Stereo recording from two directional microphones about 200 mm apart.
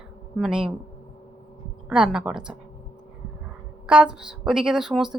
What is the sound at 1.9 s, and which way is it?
Speech, 5° right (ahead or behind).